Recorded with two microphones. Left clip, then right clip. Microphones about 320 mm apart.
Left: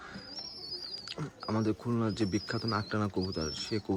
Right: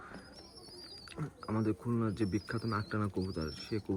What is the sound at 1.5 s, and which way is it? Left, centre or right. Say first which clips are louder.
Speech: left 3 dB; centre.